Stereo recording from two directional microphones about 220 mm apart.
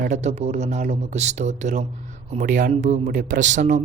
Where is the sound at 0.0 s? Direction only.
35° right (ahead or behind).